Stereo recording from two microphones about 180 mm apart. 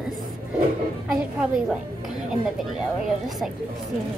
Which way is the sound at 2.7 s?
Centre (ahead or behind).